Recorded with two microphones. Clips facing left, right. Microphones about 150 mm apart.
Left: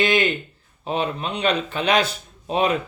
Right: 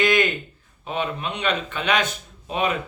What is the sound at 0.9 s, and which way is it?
Speech, 35° left (ahead or behind).